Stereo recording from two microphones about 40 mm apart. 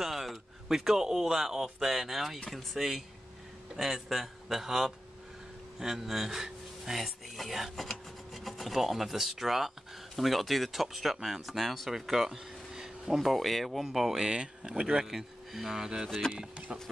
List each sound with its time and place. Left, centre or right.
0.0 s a man's voice: centre
11.9 s a sound: centre
13.2 s speech: centre; by 15.0 s right
15.0 s speech: centre